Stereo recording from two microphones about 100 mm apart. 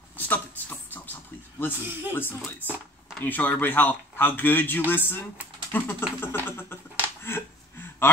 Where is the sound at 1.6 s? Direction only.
20° left (ahead or behind).